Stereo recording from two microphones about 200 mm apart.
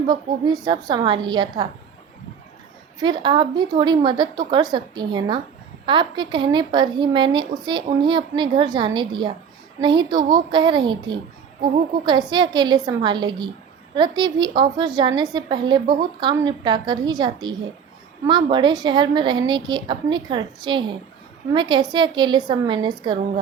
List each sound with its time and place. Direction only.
0.6 s a woman's voice: 20° right (ahead or behind)
3.0 s a woman's voice: 25° right (ahead or behind)
12.3 s a woman's voice: 20° right (ahead or behind)